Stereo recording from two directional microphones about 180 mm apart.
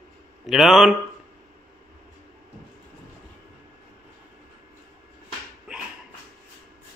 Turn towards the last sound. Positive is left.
turn(degrees=-5)  # may be behind; listen again after turning